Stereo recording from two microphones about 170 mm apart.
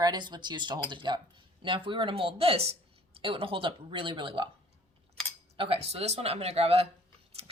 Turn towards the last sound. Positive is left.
turn(degrees=-35)  # may be behind; listen again after turning